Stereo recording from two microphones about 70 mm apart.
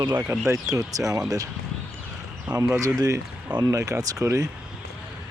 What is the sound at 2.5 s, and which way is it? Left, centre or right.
Speech, right.